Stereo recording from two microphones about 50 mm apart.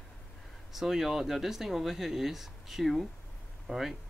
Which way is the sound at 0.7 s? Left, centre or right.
Centre.